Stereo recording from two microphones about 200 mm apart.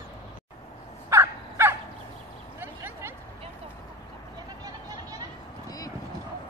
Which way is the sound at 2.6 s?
10° right (ahead or behind).